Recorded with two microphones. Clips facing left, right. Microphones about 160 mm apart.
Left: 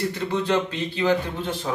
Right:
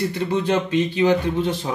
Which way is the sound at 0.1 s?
15° right (ahead or behind).